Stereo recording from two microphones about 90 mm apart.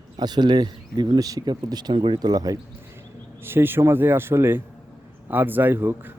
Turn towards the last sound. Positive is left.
turn(degrees=-20)  # may be behind; listen again after turning